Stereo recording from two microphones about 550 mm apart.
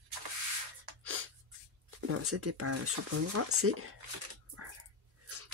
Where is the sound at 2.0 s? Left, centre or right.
Right.